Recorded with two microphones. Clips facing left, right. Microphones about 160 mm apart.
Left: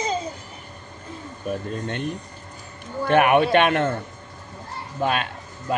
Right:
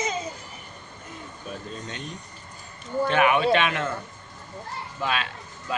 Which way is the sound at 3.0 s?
55° left (ahead or behind).